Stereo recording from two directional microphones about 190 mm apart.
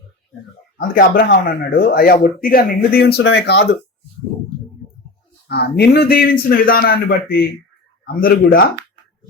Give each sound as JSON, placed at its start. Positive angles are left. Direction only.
{"t": 0.8, "sound": "speech", "side_deg": 50}
{"t": 3.2, "sound": "speech", "side_deg": 65}
{"t": 5.5, "sound": "speech", "side_deg": 60}